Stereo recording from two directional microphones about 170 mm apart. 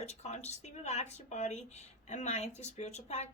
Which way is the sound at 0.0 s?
40° left (ahead or behind).